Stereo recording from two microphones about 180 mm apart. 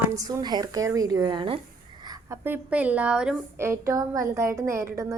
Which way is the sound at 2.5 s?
10° right (ahead or behind).